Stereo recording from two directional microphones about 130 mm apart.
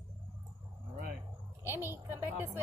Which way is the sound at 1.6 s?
20° right (ahead or behind).